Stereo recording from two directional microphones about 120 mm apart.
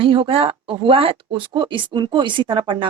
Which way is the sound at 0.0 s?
50° right (ahead or behind).